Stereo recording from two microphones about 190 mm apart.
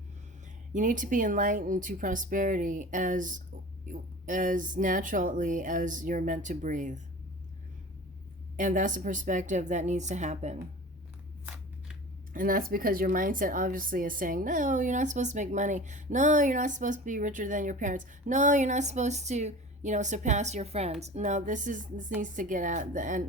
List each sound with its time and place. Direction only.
0.7 s speech: 40° right (ahead or behind)
8.5 s speech: 40° right (ahead or behind)
11.4 s shuffling cards: 5° right (ahead or behind)
12.3 s speech: 45° right (ahead or behind)